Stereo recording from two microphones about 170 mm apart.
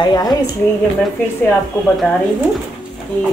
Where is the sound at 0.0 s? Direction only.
25° left (ahead or behind).